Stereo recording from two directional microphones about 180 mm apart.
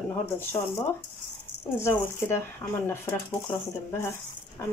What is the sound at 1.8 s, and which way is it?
Speech, 15° left (ahead or behind).